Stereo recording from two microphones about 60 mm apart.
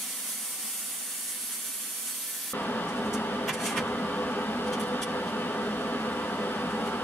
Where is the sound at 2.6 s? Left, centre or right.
Left.